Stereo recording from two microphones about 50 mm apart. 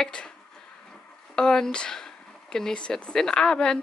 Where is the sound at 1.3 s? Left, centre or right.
Centre.